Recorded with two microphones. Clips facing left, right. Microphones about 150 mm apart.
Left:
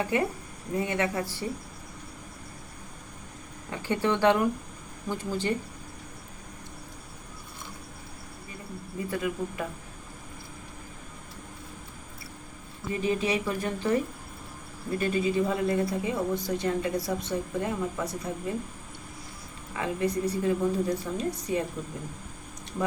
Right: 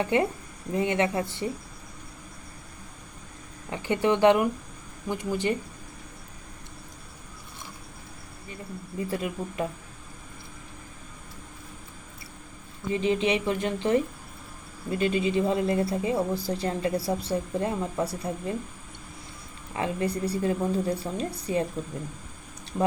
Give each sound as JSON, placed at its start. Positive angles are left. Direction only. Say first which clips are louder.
{"t": 0.0, "sound": "speech", "louder": "right 3 dB", "side_deg": -25}
{"t": 3.7, "sound": "speech", "louder": "right 3 dB", "side_deg": -15}
{"t": 9.0, "sound": "speech", "louder": "left 2 dB", "side_deg": -25}
{"t": 12.9, "sound": "speech", "louder": "right 3 dB", "side_deg": -25}
{"t": 19.7, "sound": "a woman's voice", "louder": "even", "side_deg": -30}